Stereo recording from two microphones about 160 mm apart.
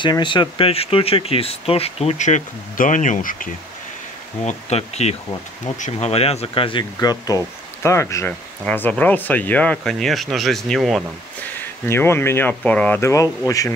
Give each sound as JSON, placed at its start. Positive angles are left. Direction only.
{"t": 0.0, "sound": "speech", "side_deg": 30}
{"t": 4.5, "sound": "speech", "side_deg": 45}
{"t": 11.8, "sound": "speech", "side_deg": 15}